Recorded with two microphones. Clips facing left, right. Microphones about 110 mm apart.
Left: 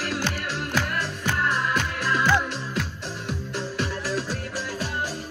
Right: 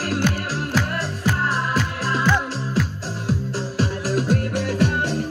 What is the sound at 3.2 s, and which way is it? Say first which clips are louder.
Music: right 6 dB; 35° right (ahead or behind).